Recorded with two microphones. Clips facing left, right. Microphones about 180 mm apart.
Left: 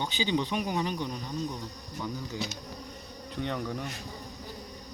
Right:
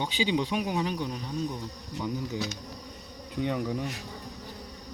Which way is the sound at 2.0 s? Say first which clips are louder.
Right 3 dB; 20° right (ahead or behind).